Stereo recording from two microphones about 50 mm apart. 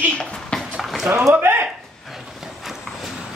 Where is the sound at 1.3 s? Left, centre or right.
Right.